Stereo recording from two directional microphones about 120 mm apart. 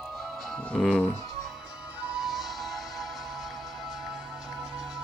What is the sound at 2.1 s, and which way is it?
Music, centre (ahead or behind).